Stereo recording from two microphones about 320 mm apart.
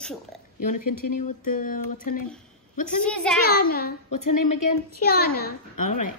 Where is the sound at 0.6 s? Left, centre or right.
Left.